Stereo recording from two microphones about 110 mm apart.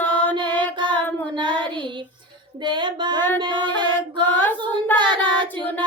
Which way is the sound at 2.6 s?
45° right (ahead or behind).